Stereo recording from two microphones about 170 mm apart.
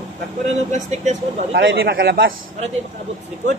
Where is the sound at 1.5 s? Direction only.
90° right; by 2.3 s 65° right (ahead or behind).